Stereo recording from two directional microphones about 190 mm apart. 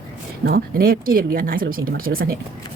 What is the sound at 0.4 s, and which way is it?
Speech, 50° right (ahead or behind).